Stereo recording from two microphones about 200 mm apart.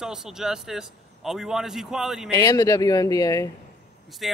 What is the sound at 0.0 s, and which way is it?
Speech, 5° right (ahead or behind).